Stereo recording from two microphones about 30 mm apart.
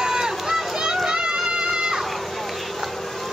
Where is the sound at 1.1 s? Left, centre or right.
Right.